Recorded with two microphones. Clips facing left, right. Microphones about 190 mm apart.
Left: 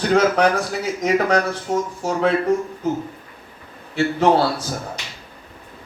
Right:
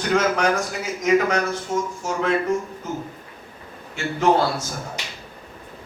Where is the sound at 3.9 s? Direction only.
35° left (ahead or behind).